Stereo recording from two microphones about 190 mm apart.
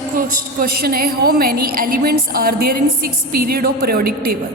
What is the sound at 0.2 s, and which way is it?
A woman's voice, 50° right (ahead or behind).